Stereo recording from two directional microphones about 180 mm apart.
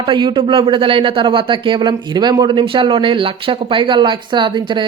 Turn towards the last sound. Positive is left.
turn(degrees=-25)  # may be behind; listen again after turning